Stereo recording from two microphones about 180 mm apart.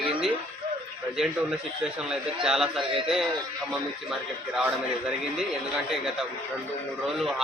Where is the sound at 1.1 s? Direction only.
Centre (ahead or behind).